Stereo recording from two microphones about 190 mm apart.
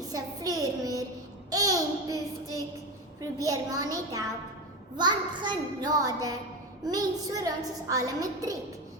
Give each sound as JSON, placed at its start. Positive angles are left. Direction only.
{"t": 0.1, "sound": "a sound", "side_deg": -15}
{"t": 1.5, "sound": "child singing", "side_deg": -20}
{"t": 3.2, "sound": "a child's voice", "side_deg": -20}